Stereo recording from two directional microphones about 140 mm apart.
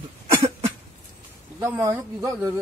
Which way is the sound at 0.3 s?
25° right (ahead or behind).